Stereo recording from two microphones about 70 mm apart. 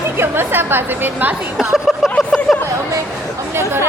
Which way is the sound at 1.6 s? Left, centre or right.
Centre.